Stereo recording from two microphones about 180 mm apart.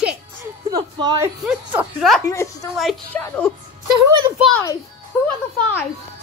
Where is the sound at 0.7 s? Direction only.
20° right (ahead or behind).